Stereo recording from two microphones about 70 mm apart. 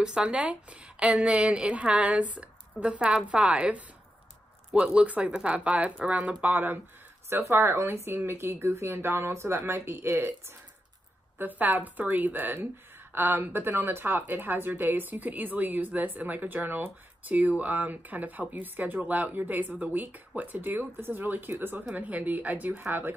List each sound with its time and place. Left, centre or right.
0.0 s a woman's voice: centre
4.6 s speech: centre
4.9 s speech: right
11.3 s speech: right